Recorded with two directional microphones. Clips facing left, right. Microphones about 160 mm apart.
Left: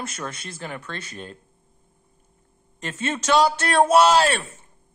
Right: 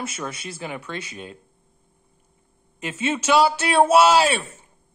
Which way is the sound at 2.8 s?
10° right (ahead or behind).